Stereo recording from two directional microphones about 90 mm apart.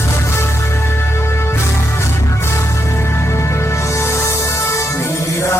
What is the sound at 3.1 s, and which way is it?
Music, 30° left (ahead or behind).